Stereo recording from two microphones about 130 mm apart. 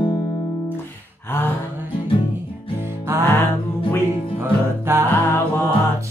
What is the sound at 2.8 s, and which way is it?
Music, 20° right (ahead or behind).